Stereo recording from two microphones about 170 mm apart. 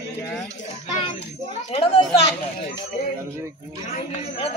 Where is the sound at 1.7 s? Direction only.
35° left (ahead or behind).